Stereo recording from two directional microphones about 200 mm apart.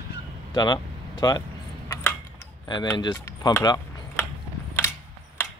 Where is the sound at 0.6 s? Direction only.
20° left (ahead or behind).